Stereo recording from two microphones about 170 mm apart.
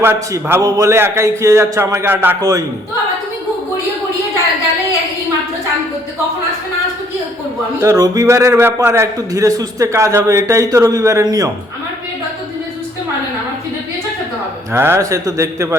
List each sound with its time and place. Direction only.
0.0 s a man's voice: 15° right (ahead or behind)
7.8 s a man's voice: 20° right (ahead or behind)
14.7 s a man's voice: 15° right (ahead or behind)